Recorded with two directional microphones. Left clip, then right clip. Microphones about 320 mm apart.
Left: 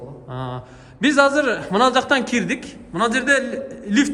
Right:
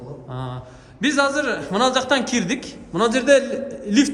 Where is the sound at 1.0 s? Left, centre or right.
Centre.